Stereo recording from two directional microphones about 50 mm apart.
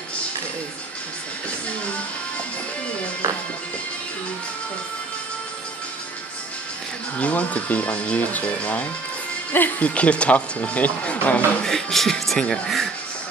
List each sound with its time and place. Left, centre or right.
7.2 s speech: left
11.6 s speech: centre